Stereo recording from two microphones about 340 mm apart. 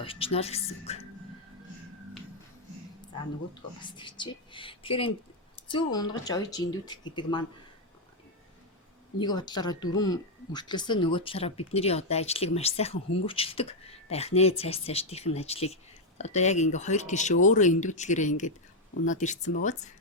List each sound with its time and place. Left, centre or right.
0.0 s speech: centre
3.0 s speech: centre
9.1 s speech: centre